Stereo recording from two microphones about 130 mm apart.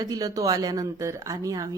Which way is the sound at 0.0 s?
30° right (ahead or behind).